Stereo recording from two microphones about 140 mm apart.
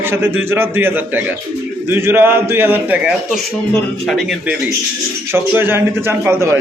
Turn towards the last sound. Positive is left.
turn(degrees=-20)  # may be behind; listen again after turning